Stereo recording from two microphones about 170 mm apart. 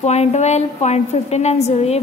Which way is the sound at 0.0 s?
40° left (ahead or behind).